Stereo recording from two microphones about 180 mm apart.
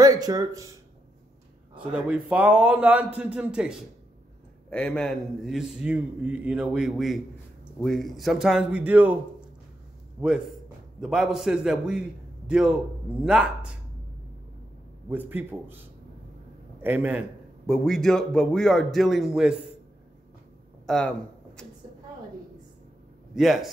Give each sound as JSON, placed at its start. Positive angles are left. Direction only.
{"t": 0.0, "sound": "speech", "side_deg": -20}
{"t": 1.8, "sound": "a man's voice", "side_deg": -5}
{"t": 4.6, "sound": "a man's voice", "side_deg": 5}
{"t": 15.0, "sound": "a man's voice", "side_deg": -10}
{"t": 16.8, "sound": "a man's voice", "side_deg": -10}
{"t": 20.8, "sound": "speech", "side_deg": 5}
{"t": 23.3, "sound": "a man's voice", "side_deg": 0}